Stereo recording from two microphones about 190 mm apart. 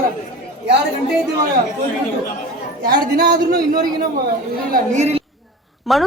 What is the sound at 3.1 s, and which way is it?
Speech, 50° right (ahead or behind).